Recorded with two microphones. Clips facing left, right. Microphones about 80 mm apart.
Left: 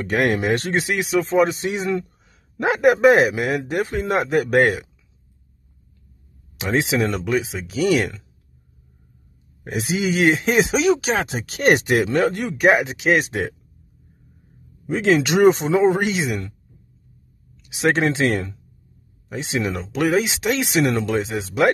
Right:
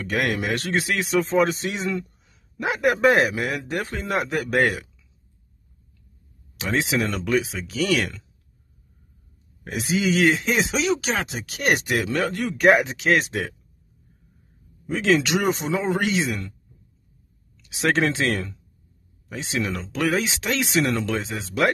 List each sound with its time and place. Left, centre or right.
0.0 s speech: left
1.0 s speech: centre; by 4.8 s left
6.6 s speech: left
9.7 s speech: left
10.7 s speech: centre
11.3 s speech: left
11.8 s speech: left
12.5 s speech: centre
13.3 s speech: left
14.9 s speech: left
17.8 s speech: left